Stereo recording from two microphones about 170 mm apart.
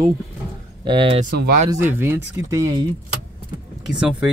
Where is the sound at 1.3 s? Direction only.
60° right (ahead or behind).